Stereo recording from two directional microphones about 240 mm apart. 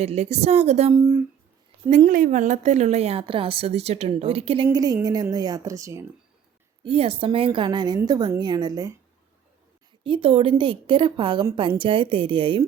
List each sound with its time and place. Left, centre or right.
0.0 s a woman's voice: right
0.9 s a woman's voice: centre
1.9 s a woman's voice: right; by 6.1 s centre
6.8 s a woman's voice: right
10.0 s a woman's voice: right